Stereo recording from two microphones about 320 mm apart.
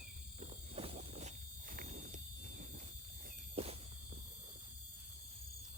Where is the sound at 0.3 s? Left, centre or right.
Centre.